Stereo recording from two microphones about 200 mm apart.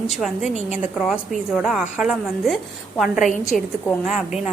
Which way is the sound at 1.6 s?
5° right (ahead or behind).